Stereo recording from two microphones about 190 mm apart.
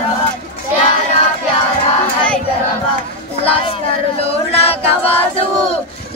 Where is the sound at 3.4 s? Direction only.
30° left (ahead or behind).